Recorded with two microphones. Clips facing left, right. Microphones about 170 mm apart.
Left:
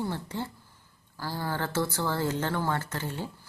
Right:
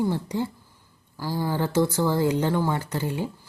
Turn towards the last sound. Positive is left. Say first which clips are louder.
# right 6 dB
turn(degrees=-15)  # may be behind; listen again after turning